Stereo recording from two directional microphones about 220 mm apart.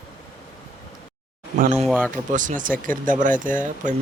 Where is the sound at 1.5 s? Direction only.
35° right (ahead or behind).